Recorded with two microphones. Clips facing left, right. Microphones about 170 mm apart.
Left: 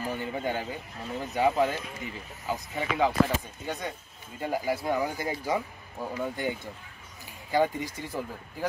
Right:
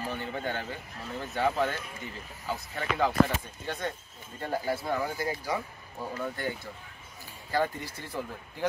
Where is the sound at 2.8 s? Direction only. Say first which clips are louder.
Left 2 dB; centre (ahead or behind).